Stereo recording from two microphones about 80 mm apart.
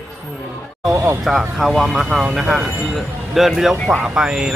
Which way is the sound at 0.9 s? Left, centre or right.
Right.